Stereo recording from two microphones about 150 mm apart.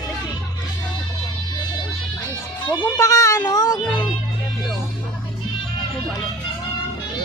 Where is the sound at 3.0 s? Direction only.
20° left (ahead or behind).